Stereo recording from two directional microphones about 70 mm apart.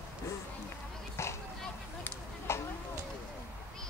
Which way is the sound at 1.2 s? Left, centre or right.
Left.